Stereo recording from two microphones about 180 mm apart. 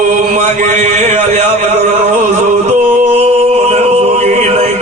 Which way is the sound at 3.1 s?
35° right (ahead or behind).